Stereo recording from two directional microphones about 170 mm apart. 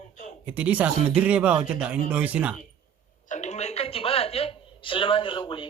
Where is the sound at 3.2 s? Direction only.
45° left (ahead or behind).